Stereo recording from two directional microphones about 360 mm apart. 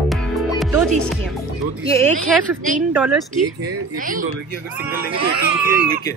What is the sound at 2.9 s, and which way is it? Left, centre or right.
Speech, centre.